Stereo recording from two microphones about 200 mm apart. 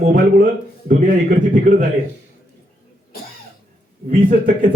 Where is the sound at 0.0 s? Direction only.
40° right (ahead or behind).